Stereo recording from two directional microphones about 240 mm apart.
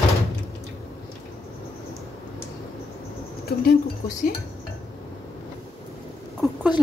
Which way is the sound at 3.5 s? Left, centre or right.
Left.